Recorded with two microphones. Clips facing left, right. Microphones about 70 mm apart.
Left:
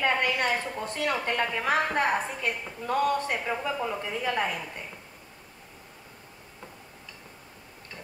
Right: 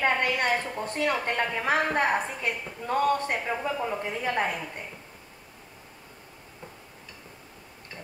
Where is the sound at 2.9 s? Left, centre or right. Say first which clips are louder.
Right 1 dB; right.